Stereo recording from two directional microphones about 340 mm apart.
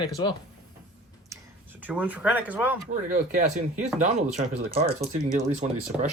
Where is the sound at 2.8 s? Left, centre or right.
Right.